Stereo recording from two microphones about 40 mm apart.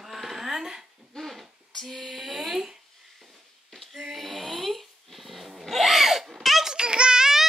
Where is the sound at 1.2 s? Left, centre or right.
Centre.